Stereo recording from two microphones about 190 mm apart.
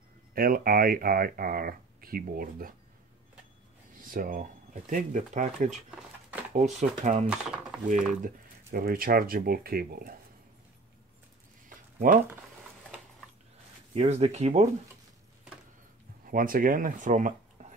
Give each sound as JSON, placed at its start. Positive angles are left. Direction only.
{"t": 0.3, "sound": "speech", "side_deg": -50}
{"t": 4.0, "sound": "speech", "side_deg": -45}
{"t": 5.7, "sound": "speech", "side_deg": -5}
{"t": 6.5, "sound": "speech", "side_deg": -40}
{"t": 7.2, "sound": "speech", "side_deg": -5}
{"t": 8.1, "sound": "speech", "side_deg": -45}
{"t": 13.9, "sound": "speech", "side_deg": -35}
{"t": 16.3, "sound": "speech", "side_deg": -50}